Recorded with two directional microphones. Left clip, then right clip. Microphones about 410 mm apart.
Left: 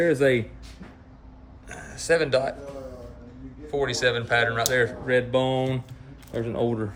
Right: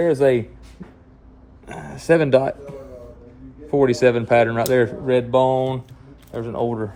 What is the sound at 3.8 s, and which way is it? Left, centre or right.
Speech, centre.